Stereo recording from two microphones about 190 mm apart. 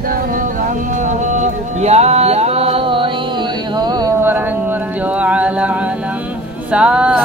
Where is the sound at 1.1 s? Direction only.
40° right (ahead or behind).